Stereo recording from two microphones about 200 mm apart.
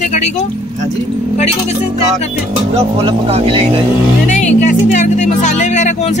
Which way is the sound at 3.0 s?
30° right (ahead or behind).